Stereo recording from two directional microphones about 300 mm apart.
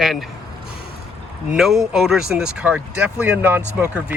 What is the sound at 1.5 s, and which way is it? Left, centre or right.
Speech, centre.